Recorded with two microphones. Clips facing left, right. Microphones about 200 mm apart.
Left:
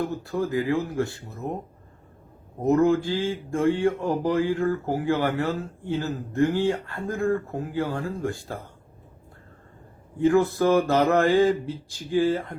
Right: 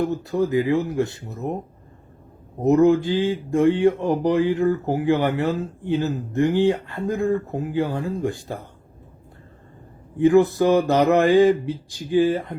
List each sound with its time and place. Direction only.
0.0 s speech: 20° right (ahead or behind)
2.6 s speech: 20° right (ahead or behind)
10.2 s a sound: 20° right (ahead or behind)